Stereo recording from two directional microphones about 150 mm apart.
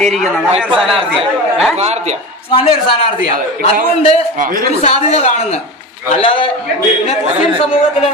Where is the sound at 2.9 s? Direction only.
40° left (ahead or behind).